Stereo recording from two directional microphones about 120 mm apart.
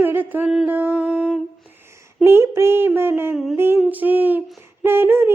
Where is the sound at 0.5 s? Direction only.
15° right (ahead or behind).